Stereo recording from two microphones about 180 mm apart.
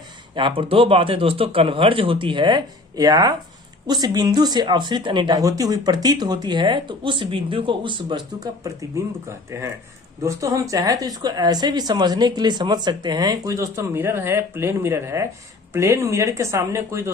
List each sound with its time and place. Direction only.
0.3 s speech: 30° right (ahead or behind)